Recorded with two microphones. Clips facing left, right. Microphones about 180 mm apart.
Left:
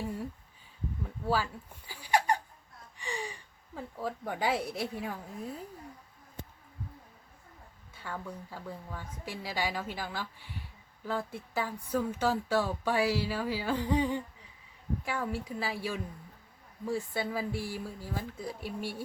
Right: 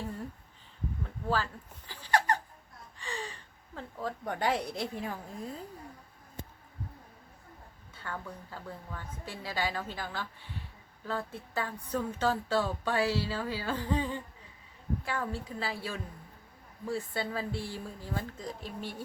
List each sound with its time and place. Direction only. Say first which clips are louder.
1.0 s a sound: left 1 dB; 10° left (ahead or behind)
3.0 s speech: left 2 dB; 15° left (ahead or behind)
7.9 s speech: left 1 dB; 10° left (ahead or behind)